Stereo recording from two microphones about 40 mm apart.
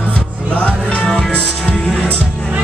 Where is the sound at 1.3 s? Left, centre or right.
Left.